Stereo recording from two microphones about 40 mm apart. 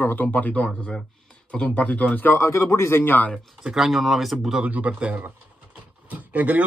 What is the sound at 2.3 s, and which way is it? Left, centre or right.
Speech, left.